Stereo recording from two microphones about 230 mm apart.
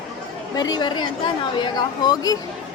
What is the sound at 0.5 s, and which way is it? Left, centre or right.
A woman's voice, centre.